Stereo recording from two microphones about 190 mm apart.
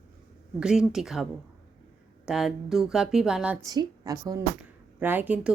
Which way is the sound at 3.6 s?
20° right (ahead or behind).